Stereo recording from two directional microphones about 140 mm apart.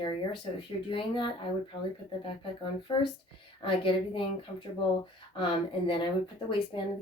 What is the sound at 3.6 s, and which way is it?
Speech, 40° left (ahead or behind).